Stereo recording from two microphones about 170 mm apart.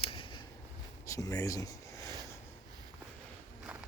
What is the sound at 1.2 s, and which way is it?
Speech, 20° left (ahead or behind).